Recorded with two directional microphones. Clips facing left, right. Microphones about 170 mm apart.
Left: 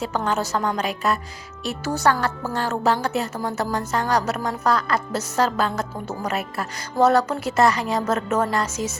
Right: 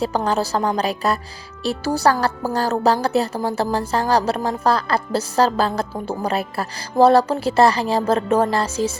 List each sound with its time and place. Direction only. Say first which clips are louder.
0.0 s speech: right 4 dB; 35° right (ahead or behind)